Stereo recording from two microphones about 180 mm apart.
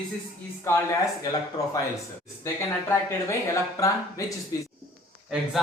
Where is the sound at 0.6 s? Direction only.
15° left (ahead or behind).